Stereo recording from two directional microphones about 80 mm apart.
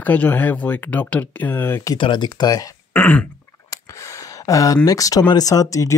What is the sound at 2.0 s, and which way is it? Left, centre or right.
Speech, left.